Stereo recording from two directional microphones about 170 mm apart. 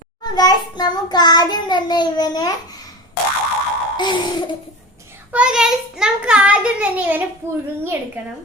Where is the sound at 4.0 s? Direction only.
25° left (ahead or behind).